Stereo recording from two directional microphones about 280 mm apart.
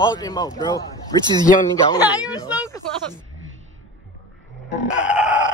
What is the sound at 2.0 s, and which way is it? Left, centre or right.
Speech, centre.